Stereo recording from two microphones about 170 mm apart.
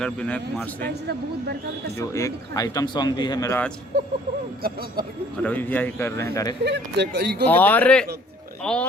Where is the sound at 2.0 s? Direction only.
20° left (ahead or behind).